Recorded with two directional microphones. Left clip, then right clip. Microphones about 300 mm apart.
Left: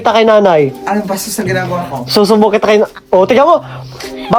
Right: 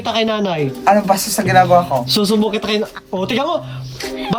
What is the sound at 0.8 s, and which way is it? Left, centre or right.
Speech, centre.